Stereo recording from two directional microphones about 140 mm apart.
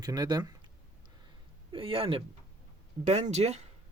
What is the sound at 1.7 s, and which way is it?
Speech, 40° right (ahead or behind).